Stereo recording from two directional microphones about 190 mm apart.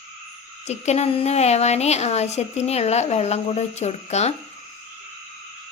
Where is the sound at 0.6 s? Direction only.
35° left (ahead or behind).